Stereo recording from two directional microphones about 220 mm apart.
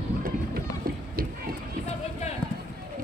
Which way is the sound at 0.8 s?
40° right (ahead or behind).